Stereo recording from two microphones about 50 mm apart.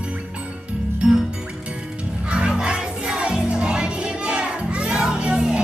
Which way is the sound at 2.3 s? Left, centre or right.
Centre.